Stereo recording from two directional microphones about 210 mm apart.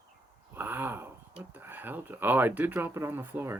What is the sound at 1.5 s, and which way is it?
Speech, 10° right (ahead or behind).